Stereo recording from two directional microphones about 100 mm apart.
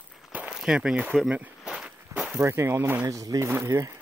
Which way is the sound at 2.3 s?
25° right (ahead or behind).